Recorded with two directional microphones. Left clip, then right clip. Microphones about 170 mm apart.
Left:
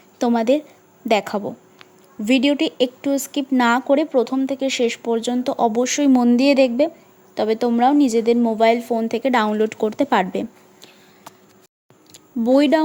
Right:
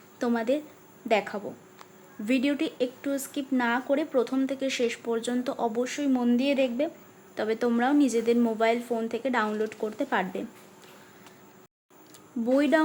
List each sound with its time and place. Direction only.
0.2 s speech: 45° left (ahead or behind)
2.2 s a woman's voice: 35° left (ahead or behind); by 10.8 s 50° left (ahead or behind)
12.5 s a woman's voice: 35° left (ahead or behind)